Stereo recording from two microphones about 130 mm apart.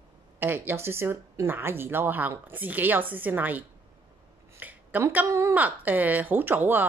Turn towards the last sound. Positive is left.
turn(degrees=-15)  # may be behind; listen again after turning